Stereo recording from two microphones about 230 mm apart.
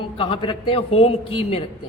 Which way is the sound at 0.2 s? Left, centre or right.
Left.